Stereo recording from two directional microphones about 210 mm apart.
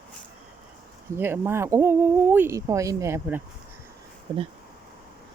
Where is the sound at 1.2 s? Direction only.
10° right (ahead or behind).